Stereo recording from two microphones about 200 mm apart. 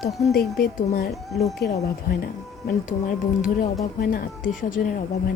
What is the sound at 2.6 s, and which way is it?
Speech, 45° left (ahead or behind).